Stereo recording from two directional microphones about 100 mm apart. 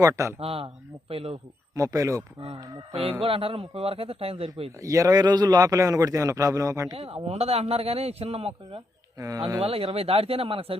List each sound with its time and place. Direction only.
0.0 s a man's voice: 30° right (ahead or behind)
0.3 s a man's voice: 75° right (ahead or behind)
1.7 s a man's voice: 35° right (ahead or behind)
3.1 s a man's voice: 70° right (ahead or behind)
4.8 s a man's voice: 30° right (ahead or behind)
6.9 s a man's voice: 85° right
9.1 s speech: 35° right (ahead or behind)
9.6 s a man's voice: 75° right (ahead or behind)